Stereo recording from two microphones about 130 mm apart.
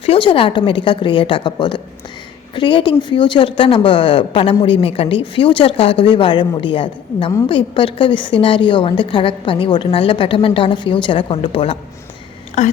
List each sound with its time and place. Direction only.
0.0 s speech: 45° left (ahead or behind)
12.6 s a woman's voice: 60° left (ahead or behind)